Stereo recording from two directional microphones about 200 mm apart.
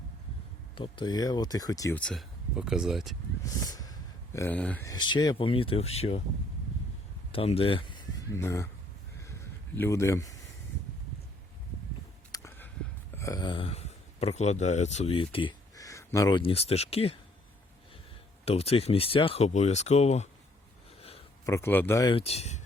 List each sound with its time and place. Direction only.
0.8 s speech: 20° left (ahead or behind)
2.0 s speech: 5° left (ahead or behind)
3.4 s a sound: 15° left (ahead or behind)
4.9 s speech: 20° left (ahead or behind)
7.3 s speech: 30° left (ahead or behind)
8.4 s a man's voice: 10° left (ahead or behind)
9.7 s a man's voice: 10° left (ahead or behind)
12.3 s a sound: 15° left (ahead or behind)
16.4 s speech: 30° left (ahead or behind)
18.4 s speech: 30° left (ahead or behind)
21.4 s a man's voice: 15° left (ahead or behind)
22.1 s speech: 30° left (ahead or behind)